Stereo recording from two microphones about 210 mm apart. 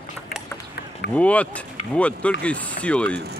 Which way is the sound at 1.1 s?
5° left (ahead or behind).